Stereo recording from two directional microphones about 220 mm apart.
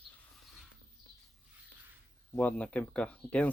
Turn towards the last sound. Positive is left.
turn(degrees=5)  # may be behind; listen again after turning